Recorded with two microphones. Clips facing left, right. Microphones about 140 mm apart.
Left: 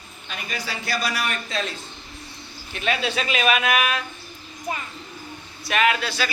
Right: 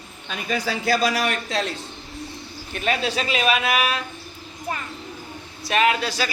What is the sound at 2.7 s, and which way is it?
A man's voice, 40° right (ahead or behind).